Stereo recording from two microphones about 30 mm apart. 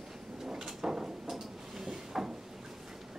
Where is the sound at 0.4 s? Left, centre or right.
Centre.